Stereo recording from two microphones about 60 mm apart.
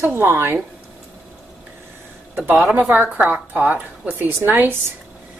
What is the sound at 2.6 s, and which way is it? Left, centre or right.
A woman's voice, right.